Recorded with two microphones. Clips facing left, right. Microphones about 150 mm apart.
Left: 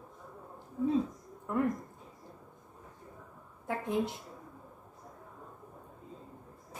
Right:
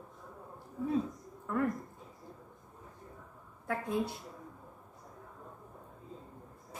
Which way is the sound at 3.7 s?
20° left (ahead or behind).